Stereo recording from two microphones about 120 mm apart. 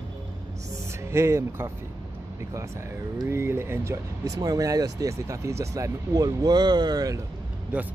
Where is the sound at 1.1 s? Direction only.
20° right (ahead or behind).